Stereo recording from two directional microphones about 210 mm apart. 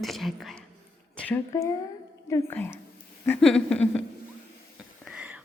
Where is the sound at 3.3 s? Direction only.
5° left (ahead or behind).